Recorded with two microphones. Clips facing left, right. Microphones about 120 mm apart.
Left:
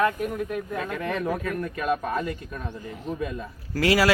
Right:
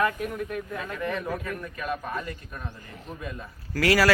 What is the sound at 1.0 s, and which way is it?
Speech, 75° left (ahead or behind).